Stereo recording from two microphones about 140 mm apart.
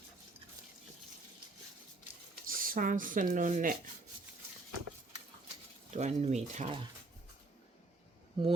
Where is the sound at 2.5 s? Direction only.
85° right.